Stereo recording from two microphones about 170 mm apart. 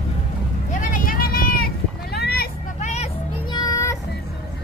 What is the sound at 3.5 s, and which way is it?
Music, 20° left (ahead or behind).